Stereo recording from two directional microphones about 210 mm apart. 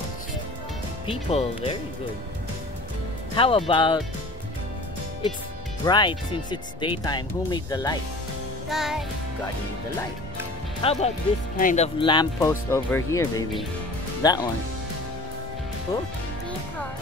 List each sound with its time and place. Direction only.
1.0 s speech: 25° left (ahead or behind)
3.3 s speech: 25° left (ahead or behind)
5.9 s speech: 20° left (ahead or behind)
8.6 s music: centre (ahead or behind)
10.8 s speech: 30° left (ahead or behind)